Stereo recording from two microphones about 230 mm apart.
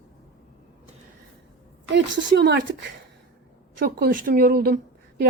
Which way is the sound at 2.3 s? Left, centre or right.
Right.